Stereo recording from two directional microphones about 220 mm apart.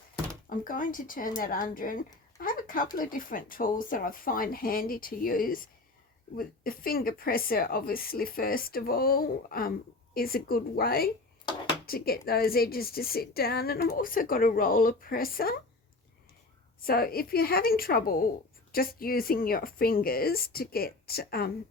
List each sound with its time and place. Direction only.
0.5 s a woman's voice: 40° left (ahead or behind)
16.8 s a woman's voice: 45° left (ahead or behind)